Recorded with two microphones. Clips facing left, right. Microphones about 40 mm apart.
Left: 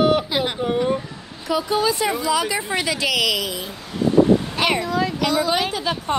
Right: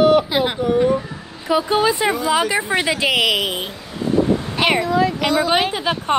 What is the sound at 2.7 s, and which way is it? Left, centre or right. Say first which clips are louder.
Speech: right 4 dB; right.